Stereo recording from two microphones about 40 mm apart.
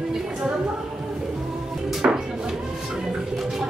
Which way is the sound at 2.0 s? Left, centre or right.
Right.